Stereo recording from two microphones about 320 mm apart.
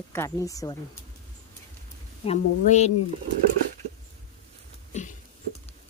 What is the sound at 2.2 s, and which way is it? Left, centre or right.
Speech, centre.